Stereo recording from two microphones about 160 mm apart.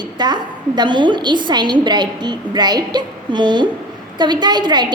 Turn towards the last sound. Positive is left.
turn(degrees=-30)  # may be behind; listen again after turning